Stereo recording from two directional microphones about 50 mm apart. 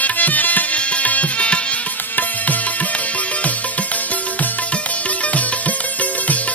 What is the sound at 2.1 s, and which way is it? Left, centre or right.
Music, left.